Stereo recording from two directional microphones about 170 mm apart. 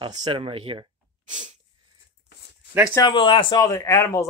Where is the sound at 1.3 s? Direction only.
45° right (ahead or behind).